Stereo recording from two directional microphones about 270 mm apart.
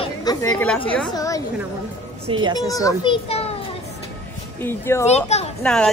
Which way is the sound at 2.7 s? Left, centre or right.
Centre.